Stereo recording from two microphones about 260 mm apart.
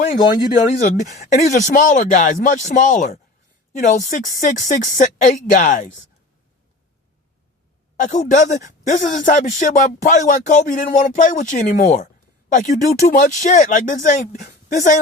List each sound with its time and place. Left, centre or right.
0.5 s speech: left
7.9 s speech: left